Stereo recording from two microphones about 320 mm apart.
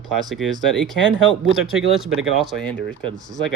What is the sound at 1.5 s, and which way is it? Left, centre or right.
Speech, centre.